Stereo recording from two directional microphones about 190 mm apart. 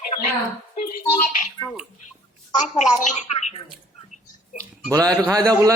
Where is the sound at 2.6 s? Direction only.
40° left (ahead or behind).